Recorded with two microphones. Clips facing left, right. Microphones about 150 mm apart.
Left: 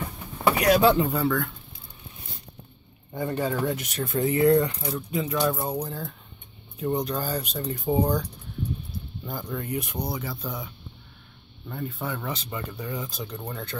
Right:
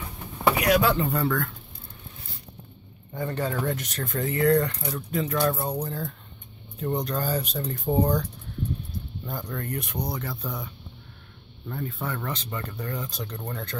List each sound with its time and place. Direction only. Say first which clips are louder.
0.7 s speech: left 4 dB; 30° left (ahead or behind)
1.1 s speech: left 1 dB; 5° left (ahead or behind)
3.2 s speech: left 2 dB; 10° left (ahead or behind)
11.7 s speech: even; centre (ahead or behind)